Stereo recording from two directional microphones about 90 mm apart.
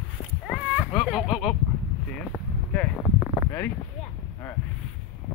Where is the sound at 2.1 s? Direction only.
10° left (ahead or behind).